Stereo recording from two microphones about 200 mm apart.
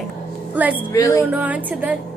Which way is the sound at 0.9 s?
15° left (ahead or behind).